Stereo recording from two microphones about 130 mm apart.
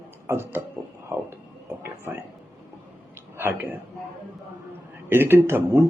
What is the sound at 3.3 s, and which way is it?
Speech, 15° right (ahead or behind).